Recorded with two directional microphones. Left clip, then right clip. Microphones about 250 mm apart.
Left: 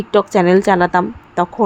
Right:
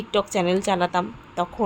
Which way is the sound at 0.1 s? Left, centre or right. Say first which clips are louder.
Left 10 dB; left.